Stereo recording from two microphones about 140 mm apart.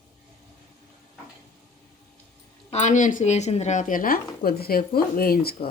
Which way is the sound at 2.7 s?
60° left (ahead or behind).